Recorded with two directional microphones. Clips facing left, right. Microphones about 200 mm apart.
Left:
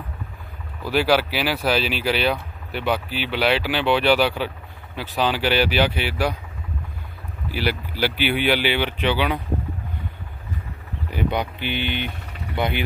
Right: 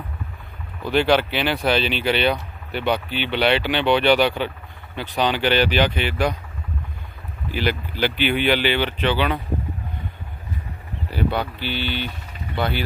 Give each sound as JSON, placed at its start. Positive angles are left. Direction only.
{"t": 0.8, "sound": "speech", "side_deg": 5}
{"t": 7.4, "sound": "speech", "side_deg": 10}
{"t": 11.1, "sound": "speech", "side_deg": 15}
{"t": 12.3, "sound": "vehicle", "side_deg": 70}
{"t": 12.5, "sound": "speech", "side_deg": 20}